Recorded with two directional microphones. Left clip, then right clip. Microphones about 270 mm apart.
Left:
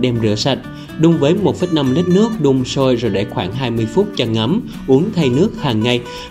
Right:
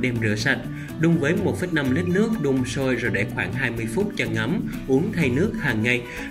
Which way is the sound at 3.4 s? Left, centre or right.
Left.